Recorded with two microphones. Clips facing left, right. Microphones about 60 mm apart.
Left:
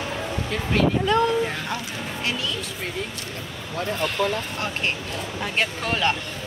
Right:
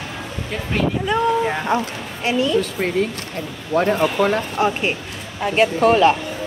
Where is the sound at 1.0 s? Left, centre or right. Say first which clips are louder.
Right 2 dB; centre.